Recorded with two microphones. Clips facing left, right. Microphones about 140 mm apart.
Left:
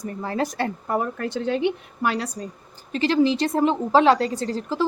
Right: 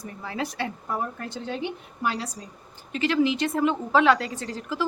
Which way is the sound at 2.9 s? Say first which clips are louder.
Left 3 dB; 35° left (ahead or behind).